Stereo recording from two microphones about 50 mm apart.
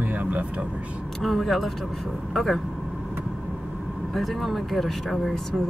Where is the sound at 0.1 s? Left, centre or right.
Right.